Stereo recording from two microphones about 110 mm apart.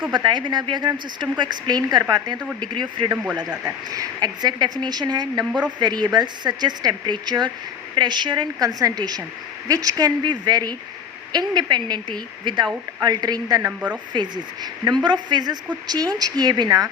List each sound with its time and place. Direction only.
0.1 s speech: 45° right (ahead or behind)
3.6 s speech: 25° right (ahead or behind)
4.2 s speech: 40° right (ahead or behind)
5.5 s speech: 10° right (ahead or behind)
5.8 s speech: 40° right (ahead or behind)
13.7 s speech: 15° right (ahead or behind)
14.1 s speech: 40° right (ahead or behind)